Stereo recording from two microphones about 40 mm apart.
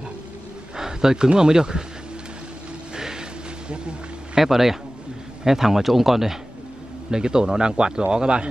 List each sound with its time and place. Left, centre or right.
0.7 s speech: centre
3.0 s a sound: centre
4.4 s speech: centre
7.1 s a man's voice: centre